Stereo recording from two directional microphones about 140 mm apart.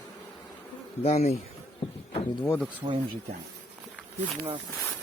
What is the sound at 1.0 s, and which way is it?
Speech, 50° left (ahead or behind).